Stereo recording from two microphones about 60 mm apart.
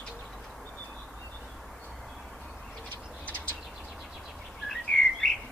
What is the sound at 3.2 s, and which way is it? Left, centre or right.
Bird, left.